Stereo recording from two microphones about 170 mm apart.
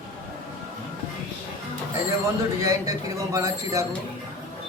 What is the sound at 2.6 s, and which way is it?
Speech, 20° right (ahead or behind).